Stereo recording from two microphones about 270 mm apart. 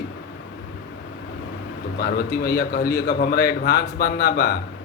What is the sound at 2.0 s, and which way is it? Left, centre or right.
A man's voice, left.